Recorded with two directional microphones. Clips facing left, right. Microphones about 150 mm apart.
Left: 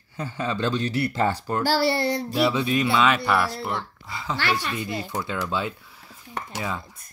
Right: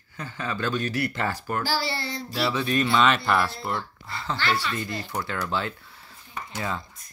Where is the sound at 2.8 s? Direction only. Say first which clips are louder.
Right 1 dB; 5° left (ahead or behind).